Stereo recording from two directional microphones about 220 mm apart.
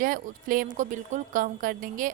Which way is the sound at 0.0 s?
40° right (ahead or behind).